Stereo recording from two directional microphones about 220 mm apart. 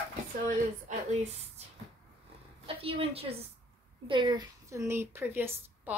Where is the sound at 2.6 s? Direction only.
25° right (ahead or behind).